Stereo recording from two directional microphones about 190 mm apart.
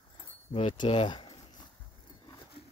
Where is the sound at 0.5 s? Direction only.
30° left (ahead or behind).